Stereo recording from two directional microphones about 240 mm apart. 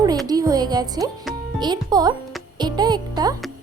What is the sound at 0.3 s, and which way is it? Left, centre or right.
A woman's voice, centre.